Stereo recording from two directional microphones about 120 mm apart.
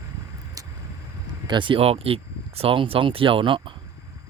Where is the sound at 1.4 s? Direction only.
40° right (ahead or behind).